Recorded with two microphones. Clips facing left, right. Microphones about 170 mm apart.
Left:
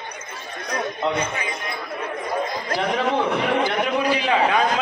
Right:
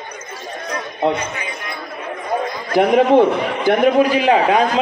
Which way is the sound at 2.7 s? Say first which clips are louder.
Right 11 dB; 55° right (ahead or behind).